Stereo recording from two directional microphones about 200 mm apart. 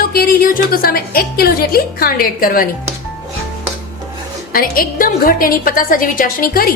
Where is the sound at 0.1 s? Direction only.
50° left (ahead or behind).